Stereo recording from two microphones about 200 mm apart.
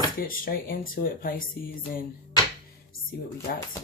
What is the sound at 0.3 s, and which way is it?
Speech, 45° left (ahead or behind).